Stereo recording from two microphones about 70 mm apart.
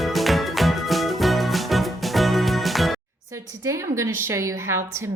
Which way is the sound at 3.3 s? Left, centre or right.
Right.